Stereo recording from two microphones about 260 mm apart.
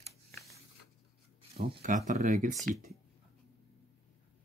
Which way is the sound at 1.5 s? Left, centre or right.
Right.